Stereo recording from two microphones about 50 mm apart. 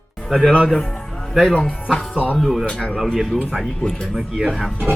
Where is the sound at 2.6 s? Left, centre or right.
Centre.